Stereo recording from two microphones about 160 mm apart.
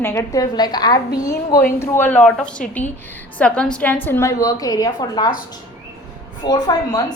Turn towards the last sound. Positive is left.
turn(degrees=25)  # may be behind; listen again after turning